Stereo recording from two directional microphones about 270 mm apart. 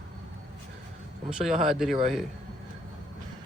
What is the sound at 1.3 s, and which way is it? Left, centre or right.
Speech, centre.